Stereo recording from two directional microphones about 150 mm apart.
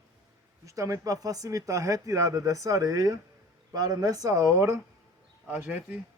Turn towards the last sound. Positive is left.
turn(degrees=-10)  # may be behind; listen again after turning